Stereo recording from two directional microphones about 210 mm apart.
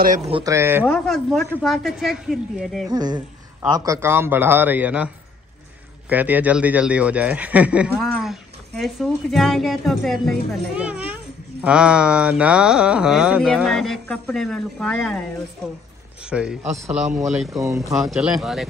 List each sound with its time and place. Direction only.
0.3 s speech: 15° right (ahead or behind)
0.8 s speech: centre (ahead or behind)
2.9 s a woman's voice: 20° right (ahead or behind); by 18.7 s centre (ahead or behind)